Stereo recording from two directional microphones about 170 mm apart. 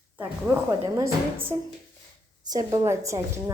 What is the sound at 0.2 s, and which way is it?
Speech, 10° right (ahead or behind).